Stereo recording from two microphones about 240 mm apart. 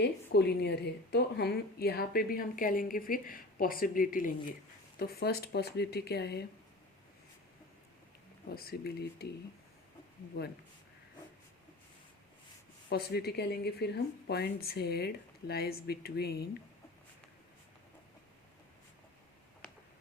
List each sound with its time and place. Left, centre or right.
0.0 s a woman's voice: left
8.5 s a woman's voice: left
12.9 s a woman's voice: left